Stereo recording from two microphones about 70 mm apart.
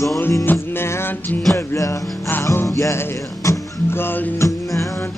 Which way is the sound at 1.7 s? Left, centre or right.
Left.